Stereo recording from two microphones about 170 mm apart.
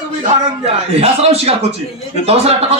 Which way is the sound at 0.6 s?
35° right (ahead or behind).